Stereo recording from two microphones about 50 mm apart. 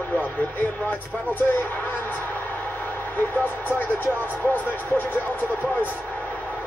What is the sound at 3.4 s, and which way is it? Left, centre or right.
Speech, left.